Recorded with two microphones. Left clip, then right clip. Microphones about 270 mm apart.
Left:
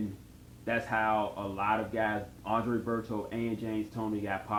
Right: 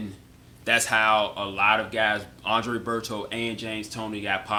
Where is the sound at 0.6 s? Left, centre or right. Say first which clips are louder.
Right 9 dB; right.